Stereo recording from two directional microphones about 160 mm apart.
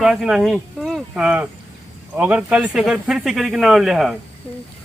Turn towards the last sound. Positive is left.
turn(degrees=0)  # may be behind; listen again after turning